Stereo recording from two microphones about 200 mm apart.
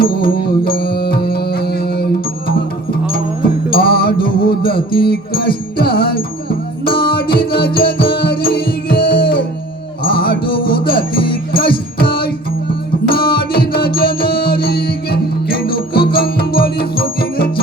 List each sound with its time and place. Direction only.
0.0 s music: 50° left (ahead or behind)
8.0 s music: 25° left (ahead or behind)
8.6 s music: 50° left (ahead or behind)